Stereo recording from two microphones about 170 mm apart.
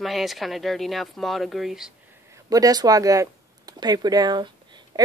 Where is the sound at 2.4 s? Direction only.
20° right (ahead or behind).